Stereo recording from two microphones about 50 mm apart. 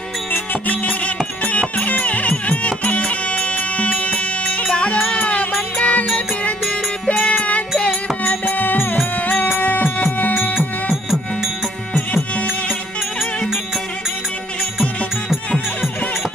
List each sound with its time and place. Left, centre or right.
0.7 s music: left
5.0 s music: left
7.2 s music: left
7.9 s music: left